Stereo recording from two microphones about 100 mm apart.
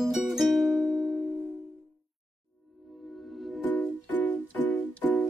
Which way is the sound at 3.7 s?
15° left (ahead or behind).